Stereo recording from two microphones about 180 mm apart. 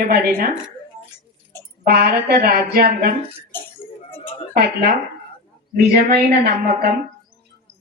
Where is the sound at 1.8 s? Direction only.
60° right (ahead or behind).